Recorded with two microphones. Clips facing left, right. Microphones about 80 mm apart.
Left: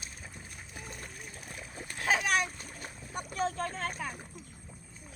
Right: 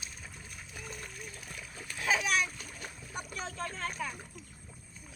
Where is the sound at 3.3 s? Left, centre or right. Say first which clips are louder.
Left 8 dB; left.